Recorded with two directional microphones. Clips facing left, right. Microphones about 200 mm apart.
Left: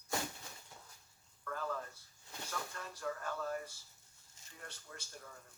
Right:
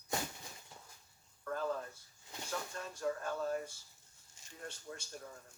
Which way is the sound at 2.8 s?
25° right (ahead or behind).